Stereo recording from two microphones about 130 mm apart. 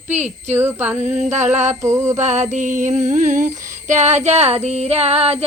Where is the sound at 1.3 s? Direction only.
65° right (ahead or behind).